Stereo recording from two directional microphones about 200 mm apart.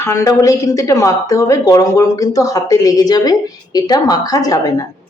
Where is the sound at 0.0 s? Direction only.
15° left (ahead or behind).